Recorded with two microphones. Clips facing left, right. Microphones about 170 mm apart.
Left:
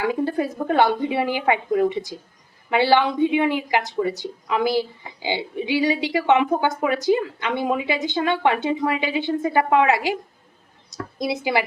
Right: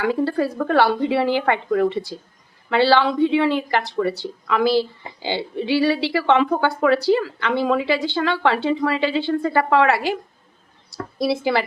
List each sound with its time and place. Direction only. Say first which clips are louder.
0.1 s a woman's voice: right 2 dB; 20° left (ahead or behind)
11.2 s speech: right 3 dB; 15° left (ahead or behind)